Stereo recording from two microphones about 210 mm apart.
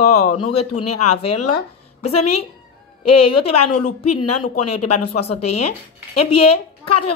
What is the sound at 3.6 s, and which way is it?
Speech, 90° left.